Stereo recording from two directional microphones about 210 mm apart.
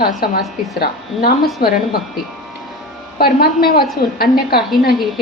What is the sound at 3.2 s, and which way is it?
A woman's voice, 45° left (ahead or behind).